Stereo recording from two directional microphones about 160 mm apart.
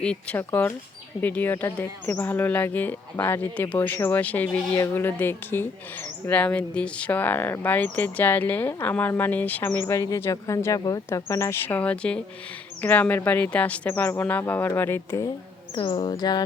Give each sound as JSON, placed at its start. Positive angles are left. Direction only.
{"t": 0.0, "sound": "speech", "side_deg": 5}
{"t": 15.7, "sound": "speech", "side_deg": 30}